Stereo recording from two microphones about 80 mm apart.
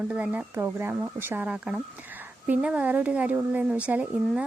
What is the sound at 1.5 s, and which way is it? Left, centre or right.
Speech, centre.